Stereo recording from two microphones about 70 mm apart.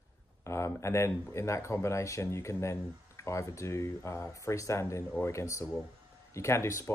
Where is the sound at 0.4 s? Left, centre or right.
Left.